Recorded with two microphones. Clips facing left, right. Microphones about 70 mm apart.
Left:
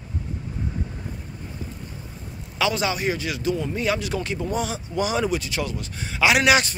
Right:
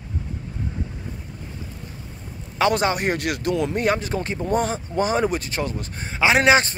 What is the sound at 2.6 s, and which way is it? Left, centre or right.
Speech, right.